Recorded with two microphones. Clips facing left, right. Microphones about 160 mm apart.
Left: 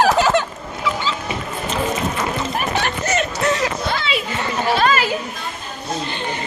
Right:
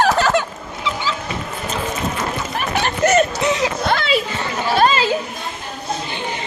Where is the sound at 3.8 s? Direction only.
60° right (ahead or behind).